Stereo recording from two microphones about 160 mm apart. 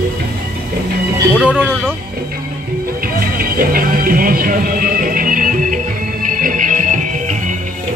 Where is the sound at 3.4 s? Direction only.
65° right (ahead or behind).